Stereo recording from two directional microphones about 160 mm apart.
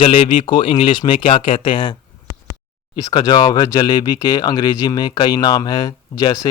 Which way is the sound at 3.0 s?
25° left (ahead or behind).